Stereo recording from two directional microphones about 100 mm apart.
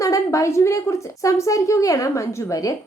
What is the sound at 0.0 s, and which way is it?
A woman's voice, 35° left (ahead or behind).